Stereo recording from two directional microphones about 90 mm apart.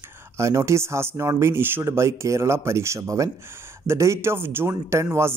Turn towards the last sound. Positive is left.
turn(degrees=-30)  # may be behind; listen again after turning